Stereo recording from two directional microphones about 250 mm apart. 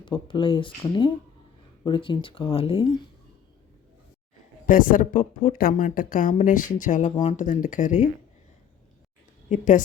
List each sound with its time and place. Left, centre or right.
0.0 s speech: centre
4.6 s a woman's voice: left
9.5 s a woman's voice: left